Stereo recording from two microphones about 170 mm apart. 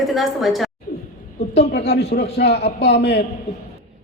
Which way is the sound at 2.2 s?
75° left (ahead or behind).